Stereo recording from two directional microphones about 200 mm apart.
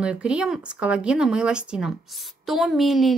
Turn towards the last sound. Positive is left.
turn(degrees=0)  # may be behind; listen again after turning